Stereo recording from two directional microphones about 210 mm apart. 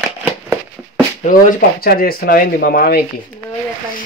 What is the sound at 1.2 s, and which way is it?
Speech, 45° left (ahead or behind).